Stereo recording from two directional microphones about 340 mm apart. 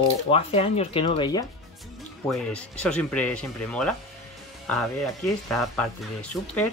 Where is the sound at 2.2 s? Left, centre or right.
Centre.